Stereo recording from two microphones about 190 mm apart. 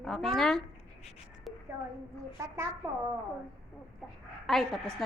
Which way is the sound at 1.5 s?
Centre (ahead or behind).